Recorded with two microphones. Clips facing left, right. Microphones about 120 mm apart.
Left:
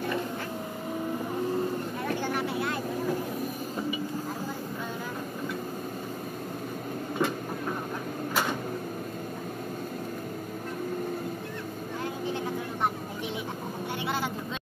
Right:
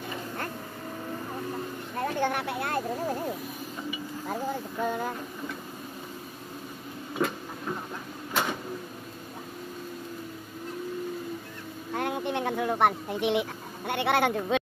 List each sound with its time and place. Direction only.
2.0 s vehicle: 55° right (ahead or behind)
7.2 s vehicle: 5° left (ahead or behind)
12.0 s vehicle: 65° right (ahead or behind)